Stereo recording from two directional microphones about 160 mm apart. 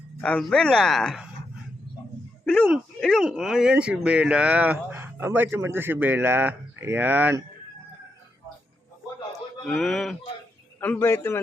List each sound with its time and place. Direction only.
0.2 s speech: 5° left (ahead or behind)
2.4 s a sound: 5° left (ahead or behind)
2.6 s speech: 5° right (ahead or behind)
9.6 s a man's voice: 5° left (ahead or behind)